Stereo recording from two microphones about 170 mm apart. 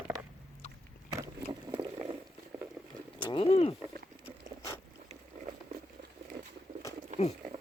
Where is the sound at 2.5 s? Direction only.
10° right (ahead or behind).